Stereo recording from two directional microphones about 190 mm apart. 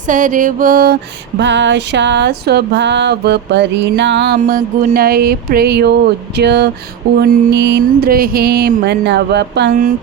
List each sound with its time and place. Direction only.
0.1 s music: 45° right (ahead or behind)
1.4 s music: 70° right (ahead or behind)